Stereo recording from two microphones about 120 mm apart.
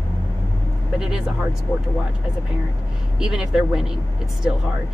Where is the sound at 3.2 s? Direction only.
5° right (ahead or behind).